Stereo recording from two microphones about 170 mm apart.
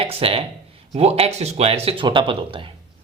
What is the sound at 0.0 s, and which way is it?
Speech, 35° right (ahead or behind).